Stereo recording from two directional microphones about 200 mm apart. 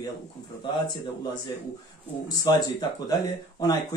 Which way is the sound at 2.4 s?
20° left (ahead or behind).